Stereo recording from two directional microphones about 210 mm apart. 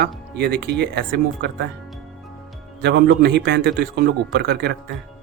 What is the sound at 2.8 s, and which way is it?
A man's voice, 55° right (ahead or behind).